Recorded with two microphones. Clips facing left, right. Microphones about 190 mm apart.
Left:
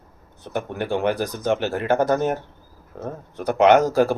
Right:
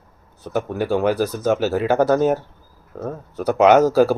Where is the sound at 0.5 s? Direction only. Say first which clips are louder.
Right 4 dB; 5° right (ahead or behind).